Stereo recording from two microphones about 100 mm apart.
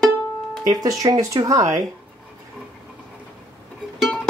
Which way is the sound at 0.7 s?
40° right (ahead or behind).